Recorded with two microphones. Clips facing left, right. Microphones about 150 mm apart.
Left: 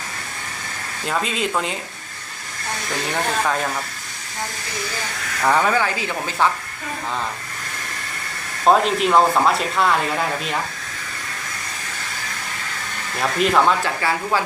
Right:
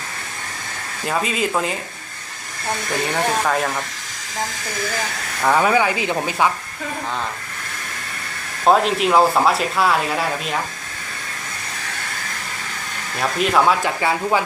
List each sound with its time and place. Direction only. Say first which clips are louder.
1.0 s speech: right 2 dB; 5° right (ahead or behind)
3.0 s speech: right 1 dB; centre (ahead or behind)
5.4 s speech: right 2 dB; 5° right (ahead or behind)
8.6 s speech: even; centre (ahead or behind)
13.1 s speech: even; centre (ahead or behind)
13.8 s speech: right 2 dB; 20° right (ahead or behind)